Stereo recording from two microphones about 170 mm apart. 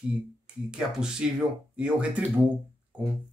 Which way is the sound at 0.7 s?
5° right (ahead or behind).